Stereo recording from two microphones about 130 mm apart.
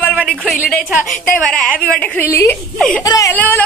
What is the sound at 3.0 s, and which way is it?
Speech, 30° left (ahead or behind).